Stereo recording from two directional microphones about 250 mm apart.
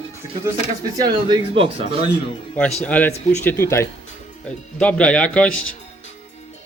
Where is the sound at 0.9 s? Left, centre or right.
Centre.